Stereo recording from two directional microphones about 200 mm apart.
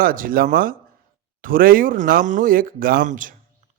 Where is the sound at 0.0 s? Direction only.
45° right (ahead or behind).